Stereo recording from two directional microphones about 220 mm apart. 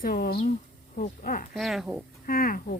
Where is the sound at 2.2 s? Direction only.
40° left (ahead or behind).